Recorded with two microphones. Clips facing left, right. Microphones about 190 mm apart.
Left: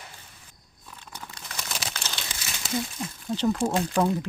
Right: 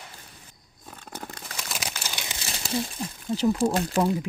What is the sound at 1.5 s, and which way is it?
Crumpling, 5° right (ahead or behind).